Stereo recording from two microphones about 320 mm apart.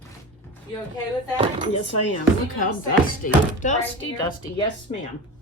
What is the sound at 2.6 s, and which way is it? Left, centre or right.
Speech, left.